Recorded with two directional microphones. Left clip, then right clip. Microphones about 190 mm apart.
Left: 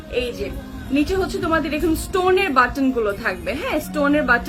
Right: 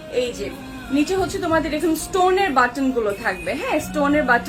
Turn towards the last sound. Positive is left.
turn(degrees=20)  # may be behind; listen again after turning